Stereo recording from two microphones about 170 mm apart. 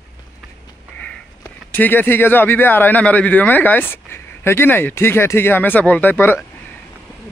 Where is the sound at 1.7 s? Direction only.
10° left (ahead or behind).